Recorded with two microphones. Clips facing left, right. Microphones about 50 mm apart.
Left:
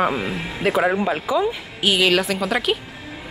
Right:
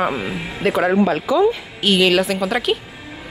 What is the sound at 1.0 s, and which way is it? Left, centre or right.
A woman's voice, centre.